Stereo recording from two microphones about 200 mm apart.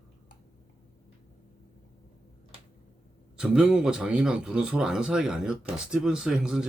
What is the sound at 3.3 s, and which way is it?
A man's voice, 5° right (ahead or behind).